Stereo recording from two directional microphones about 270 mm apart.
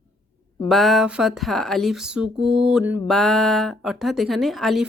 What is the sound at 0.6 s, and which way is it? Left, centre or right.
Speech, centre.